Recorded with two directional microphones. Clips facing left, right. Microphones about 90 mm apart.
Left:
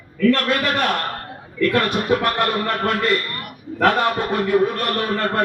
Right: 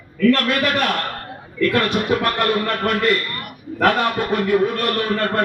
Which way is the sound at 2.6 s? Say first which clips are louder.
Right 1 dB; 35° left (ahead or behind).